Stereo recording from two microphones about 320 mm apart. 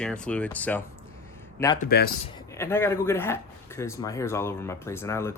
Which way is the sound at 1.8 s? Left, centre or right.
Left.